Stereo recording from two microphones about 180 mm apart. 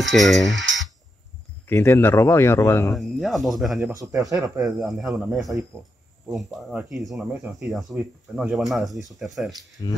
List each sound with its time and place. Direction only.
0.0 s speech: centre (ahead or behind)
1.7 s speech: 15° left (ahead or behind)
2.9 s speech: centre (ahead or behind)
3.9 s speech: 20° right (ahead or behind)
4.6 s speech: centre (ahead or behind)
9.8 s speech: 25° left (ahead or behind)